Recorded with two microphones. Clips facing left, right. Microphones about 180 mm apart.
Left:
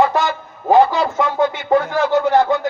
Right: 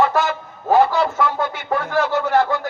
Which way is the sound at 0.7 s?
15° left (ahead or behind).